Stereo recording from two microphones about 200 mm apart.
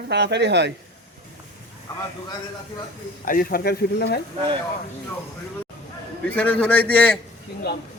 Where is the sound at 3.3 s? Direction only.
45° left (ahead or behind).